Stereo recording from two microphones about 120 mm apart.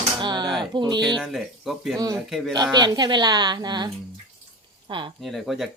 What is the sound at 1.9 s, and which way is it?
A woman's voice, 30° right (ahead or behind).